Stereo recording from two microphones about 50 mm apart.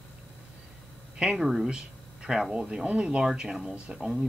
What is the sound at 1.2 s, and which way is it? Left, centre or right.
Speech, centre.